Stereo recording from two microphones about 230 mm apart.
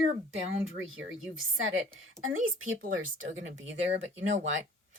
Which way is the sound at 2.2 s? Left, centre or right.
Right.